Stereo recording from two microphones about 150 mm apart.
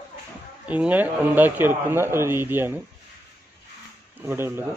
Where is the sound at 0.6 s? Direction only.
10° right (ahead or behind).